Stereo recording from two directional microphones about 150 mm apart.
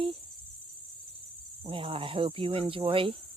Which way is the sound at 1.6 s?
35° right (ahead or behind).